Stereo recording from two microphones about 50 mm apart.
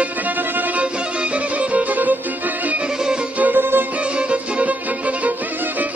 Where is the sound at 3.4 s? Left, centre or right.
Right.